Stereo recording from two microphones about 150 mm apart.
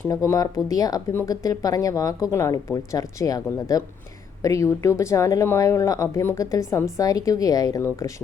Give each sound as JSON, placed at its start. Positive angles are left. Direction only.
{"t": 0.0, "sound": "speech", "side_deg": 20}